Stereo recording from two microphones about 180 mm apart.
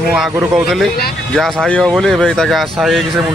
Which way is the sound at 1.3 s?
Centre (ahead or behind).